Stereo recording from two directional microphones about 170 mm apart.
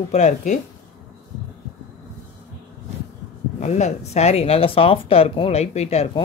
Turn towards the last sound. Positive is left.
turn(degrees=40)  # may be behind; listen again after turning